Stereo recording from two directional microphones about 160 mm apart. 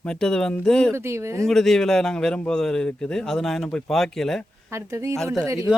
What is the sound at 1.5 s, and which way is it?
A man's voice, 5° left (ahead or behind).